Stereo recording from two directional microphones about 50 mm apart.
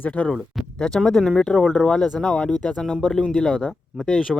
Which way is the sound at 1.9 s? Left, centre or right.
Centre.